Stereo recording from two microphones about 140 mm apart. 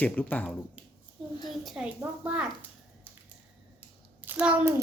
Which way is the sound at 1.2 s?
Centre (ahead or behind).